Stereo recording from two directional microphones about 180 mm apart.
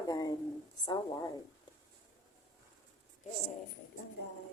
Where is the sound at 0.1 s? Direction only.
20° left (ahead or behind).